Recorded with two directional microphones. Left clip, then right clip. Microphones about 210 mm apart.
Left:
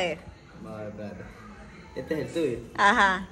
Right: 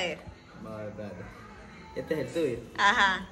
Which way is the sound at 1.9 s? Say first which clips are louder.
Left 1 dB; 5° left (ahead or behind).